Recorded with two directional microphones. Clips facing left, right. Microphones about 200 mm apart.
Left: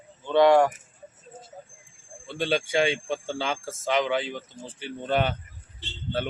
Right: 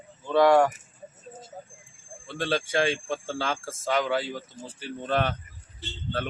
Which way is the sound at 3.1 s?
Centre (ahead or behind).